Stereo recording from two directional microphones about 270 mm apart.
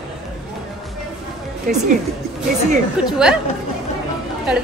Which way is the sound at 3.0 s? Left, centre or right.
Centre.